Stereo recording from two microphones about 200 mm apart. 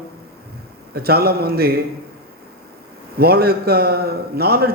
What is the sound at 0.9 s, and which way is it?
Speech, 50° right (ahead or behind).